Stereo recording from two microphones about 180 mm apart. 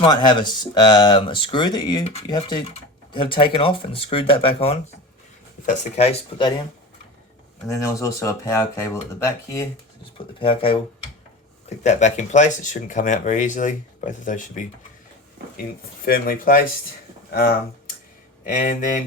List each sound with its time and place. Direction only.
0.0 s speech: 25° left (ahead or behind)
7.7 s speech: 15° left (ahead or behind)
10.4 s speech: 30° left (ahead or behind)
11.8 s speech: 40° left (ahead or behind)
16.0 s speech: 55° left (ahead or behind)